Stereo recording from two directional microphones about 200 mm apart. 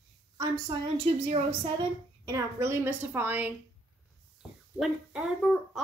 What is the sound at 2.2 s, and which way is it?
A woman's voice, 15° right (ahead or behind).